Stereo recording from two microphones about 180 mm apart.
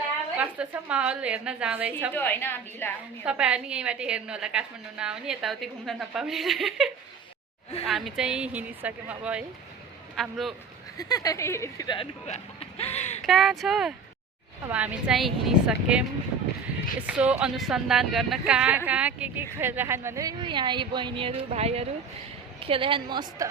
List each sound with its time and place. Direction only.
0.3 s a woman's voice: 5° right (ahead or behind)
2.1 s a woman's voice: 10° left (ahead or behind)
3.2 s a woman's voice: 5° right (ahead or behind)
10.9 s speech: 20° left (ahead or behind)
11.9 s speech: 35° left (ahead or behind)
13.2 s a woman's voice: centre (ahead or behind)
17.1 s a woman's voice: 5° right (ahead or behind); by 23.5 s 25° right (ahead or behind)